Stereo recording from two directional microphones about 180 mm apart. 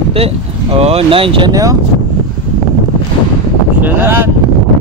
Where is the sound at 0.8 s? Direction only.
35° right (ahead or behind).